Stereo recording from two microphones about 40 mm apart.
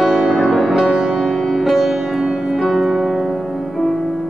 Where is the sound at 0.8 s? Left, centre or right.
Right.